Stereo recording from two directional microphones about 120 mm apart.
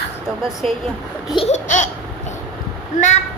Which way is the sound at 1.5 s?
90° left.